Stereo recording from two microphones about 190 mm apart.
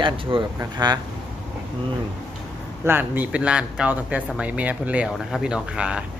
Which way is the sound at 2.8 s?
10° right (ahead or behind).